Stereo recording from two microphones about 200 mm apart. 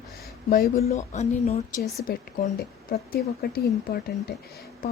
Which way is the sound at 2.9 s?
50° left (ahead or behind).